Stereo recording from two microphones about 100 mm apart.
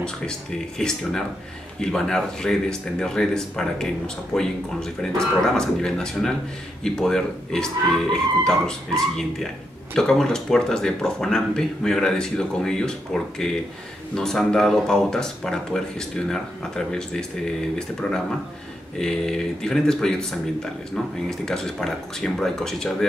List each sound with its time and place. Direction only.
0.0 s speech: 5° left (ahead or behind)